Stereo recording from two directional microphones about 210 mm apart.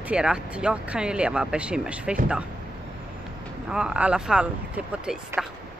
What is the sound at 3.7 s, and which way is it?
Speech, 5° right (ahead or behind).